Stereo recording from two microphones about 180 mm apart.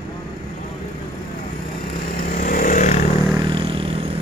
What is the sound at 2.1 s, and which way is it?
Vehicle, 50° left (ahead or behind).